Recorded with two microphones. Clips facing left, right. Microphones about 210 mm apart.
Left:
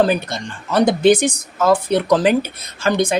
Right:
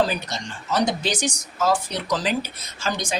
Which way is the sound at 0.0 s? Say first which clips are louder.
Left 6 dB; 55° left (ahead or behind).